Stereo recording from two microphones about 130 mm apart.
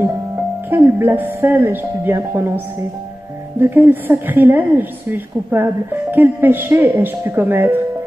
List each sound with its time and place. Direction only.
0.7 s a woman's voice: 15° right (ahead or behind)